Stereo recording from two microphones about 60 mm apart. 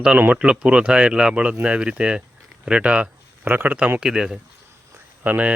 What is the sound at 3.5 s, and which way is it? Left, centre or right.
Speech, right.